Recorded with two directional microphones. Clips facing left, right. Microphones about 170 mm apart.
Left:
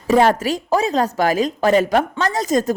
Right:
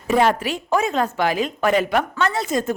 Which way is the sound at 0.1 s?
40° left (ahead or behind).